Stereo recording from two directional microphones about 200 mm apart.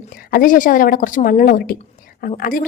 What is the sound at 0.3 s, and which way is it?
A woman's voice, 45° left (ahead or behind).